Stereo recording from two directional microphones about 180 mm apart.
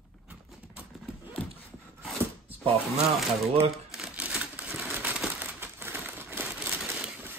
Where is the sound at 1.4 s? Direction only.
10° left (ahead or behind).